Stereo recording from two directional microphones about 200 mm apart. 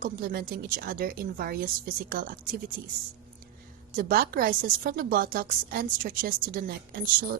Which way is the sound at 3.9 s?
45° right (ahead or behind).